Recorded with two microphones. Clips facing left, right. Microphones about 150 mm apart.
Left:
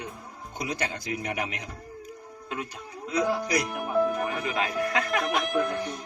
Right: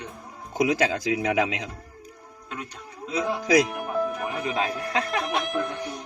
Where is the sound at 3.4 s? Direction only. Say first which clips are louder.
Right 8 dB; 90° right.